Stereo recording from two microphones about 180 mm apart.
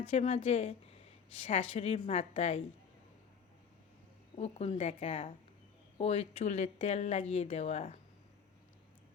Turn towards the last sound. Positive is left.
turn(degrees=35)  # may be behind; listen again after turning